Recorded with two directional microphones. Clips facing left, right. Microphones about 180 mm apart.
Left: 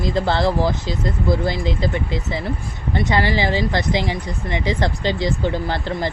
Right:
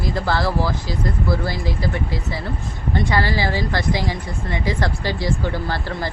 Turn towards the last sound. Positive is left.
turn(degrees=20)  # may be behind; listen again after turning